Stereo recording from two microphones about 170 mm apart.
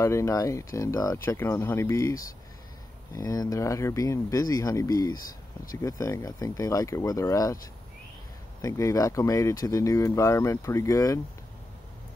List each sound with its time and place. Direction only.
0.0 s speech: 15° left (ahead or behind)
3.2 s speech: 20° left (ahead or behind)
8.5 s speech: 20° left (ahead or behind)